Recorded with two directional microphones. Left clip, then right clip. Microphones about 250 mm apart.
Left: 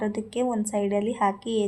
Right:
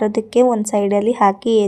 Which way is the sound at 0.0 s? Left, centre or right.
Right.